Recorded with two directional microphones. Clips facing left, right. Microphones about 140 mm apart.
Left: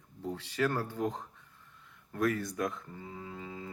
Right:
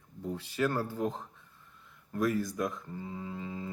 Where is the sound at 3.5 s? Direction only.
15° right (ahead or behind).